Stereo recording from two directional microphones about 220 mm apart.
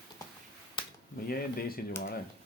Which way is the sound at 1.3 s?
45° left (ahead or behind).